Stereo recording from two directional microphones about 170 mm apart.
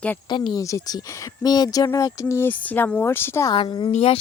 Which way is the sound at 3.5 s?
30° left (ahead or behind).